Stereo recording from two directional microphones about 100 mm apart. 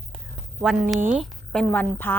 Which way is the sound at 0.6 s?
Centre (ahead or behind).